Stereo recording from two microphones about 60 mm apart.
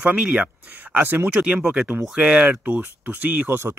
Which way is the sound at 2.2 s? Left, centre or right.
Right.